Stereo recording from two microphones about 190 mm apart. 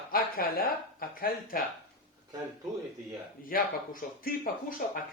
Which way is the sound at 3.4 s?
50° left (ahead or behind).